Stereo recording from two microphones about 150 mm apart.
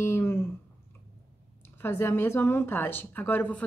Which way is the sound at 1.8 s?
15° left (ahead or behind).